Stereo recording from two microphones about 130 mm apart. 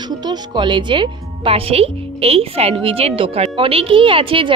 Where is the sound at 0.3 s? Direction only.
35° right (ahead or behind).